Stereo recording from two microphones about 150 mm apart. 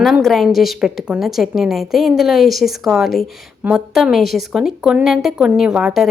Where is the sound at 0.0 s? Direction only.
Centre (ahead or behind).